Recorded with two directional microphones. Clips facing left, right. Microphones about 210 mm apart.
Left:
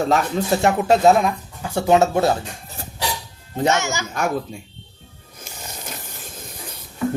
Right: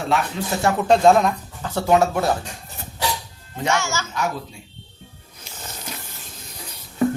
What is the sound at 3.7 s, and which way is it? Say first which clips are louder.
Speech: left 1 dB; 15° left (ahead or behind).